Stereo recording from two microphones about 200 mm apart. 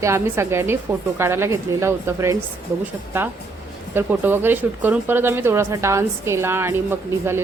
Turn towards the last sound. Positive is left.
turn(degrees=-10)  # may be behind; listen again after turning